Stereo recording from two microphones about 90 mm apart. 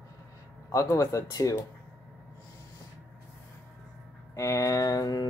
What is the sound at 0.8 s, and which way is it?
Speech, 35° left (ahead or behind).